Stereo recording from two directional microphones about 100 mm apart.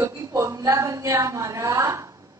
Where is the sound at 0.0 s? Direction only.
35° right (ahead or behind).